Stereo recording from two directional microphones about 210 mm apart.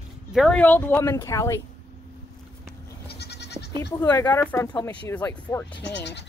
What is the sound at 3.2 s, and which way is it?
Goat, 50° left (ahead or behind).